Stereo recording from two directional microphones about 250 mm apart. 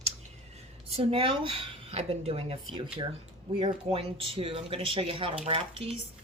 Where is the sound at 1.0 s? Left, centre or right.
Right.